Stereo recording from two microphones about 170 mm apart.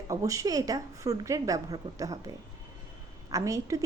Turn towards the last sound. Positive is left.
turn(degrees=-20)  # may be behind; listen again after turning